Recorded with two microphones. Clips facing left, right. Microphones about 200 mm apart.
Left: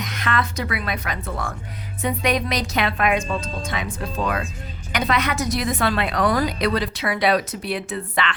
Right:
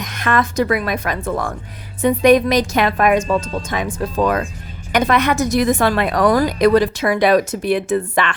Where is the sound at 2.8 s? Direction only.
45° right (ahead or behind).